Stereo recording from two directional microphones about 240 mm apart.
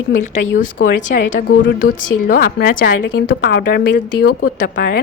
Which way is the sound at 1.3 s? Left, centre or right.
Left.